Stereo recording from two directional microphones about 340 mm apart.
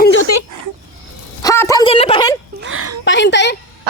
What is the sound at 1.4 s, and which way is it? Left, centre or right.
Speech, centre.